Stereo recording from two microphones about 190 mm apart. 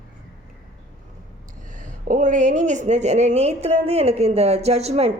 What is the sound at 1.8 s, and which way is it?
A woman's voice, 45° right (ahead or behind).